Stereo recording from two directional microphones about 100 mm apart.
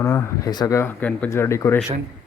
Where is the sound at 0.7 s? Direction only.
25° left (ahead or behind).